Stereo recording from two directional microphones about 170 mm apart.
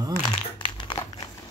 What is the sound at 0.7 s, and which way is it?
Crumpling, 25° left (ahead or behind).